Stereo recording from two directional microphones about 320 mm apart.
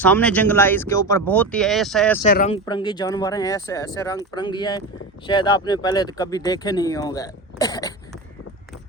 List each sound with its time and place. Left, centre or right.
0.0 s speech: centre
2.2 s speech: left
2.6 s speech: centre